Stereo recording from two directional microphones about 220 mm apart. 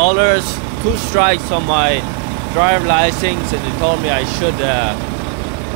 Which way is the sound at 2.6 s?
30° right (ahead or behind).